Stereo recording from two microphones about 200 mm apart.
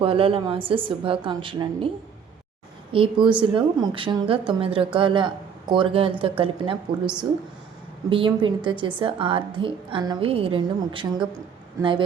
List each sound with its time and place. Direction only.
0.0 s a woman's voice: 25° right (ahead or behind)
2.9 s a woman's voice: 25° right (ahead or behind)
8.1 s a woman's voice: 25° right (ahead or behind)